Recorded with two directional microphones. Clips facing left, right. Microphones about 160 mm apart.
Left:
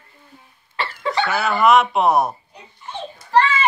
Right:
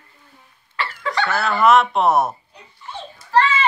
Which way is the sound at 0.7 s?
25° left (ahead or behind).